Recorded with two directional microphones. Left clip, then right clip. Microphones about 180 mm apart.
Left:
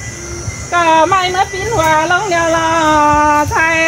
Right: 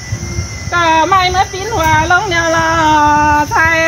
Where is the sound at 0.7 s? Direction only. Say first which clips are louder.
Even; 60° right (ahead or behind).